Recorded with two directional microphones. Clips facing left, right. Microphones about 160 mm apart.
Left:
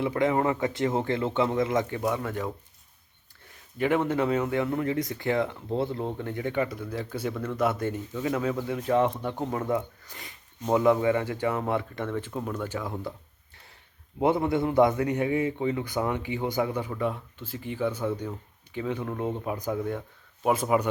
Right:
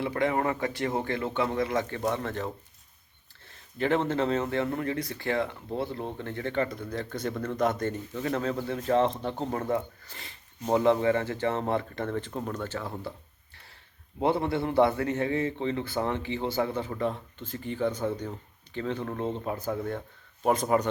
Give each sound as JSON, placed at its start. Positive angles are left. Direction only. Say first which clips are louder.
{"t": 0.0, "sound": "speech", "louder": "left 3 dB", "side_deg": 20}
{"t": 3.8, "sound": "speech", "louder": "left 1 dB", "side_deg": 10}
{"t": 14.2, "sound": "speech", "louder": "left 2 dB", "side_deg": 20}